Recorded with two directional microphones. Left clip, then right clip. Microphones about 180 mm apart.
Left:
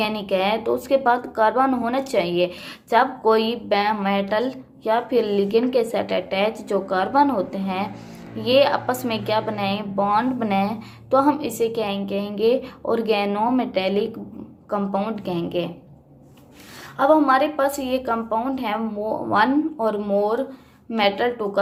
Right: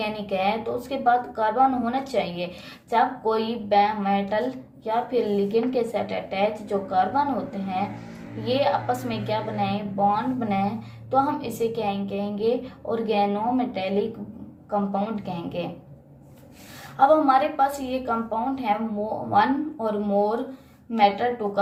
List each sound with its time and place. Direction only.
0.0 s speech: 40° left (ahead or behind)
17.0 s a woman's voice: 40° left (ahead or behind)